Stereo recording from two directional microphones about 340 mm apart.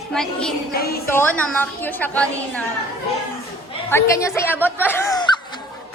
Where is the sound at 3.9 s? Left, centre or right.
Centre.